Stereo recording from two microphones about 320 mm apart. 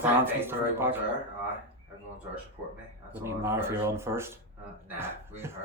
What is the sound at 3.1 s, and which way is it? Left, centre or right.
Speech, centre.